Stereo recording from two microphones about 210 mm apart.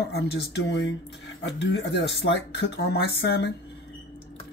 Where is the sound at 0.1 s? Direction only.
55° left (ahead or behind).